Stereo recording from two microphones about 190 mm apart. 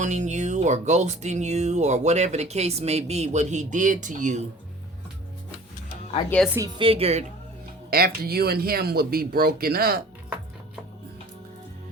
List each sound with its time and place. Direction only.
0.0 s speech: 40° right (ahead or behind)
6.7 s speech: 30° right (ahead or behind)
7.9 s speech: 50° right (ahead or behind)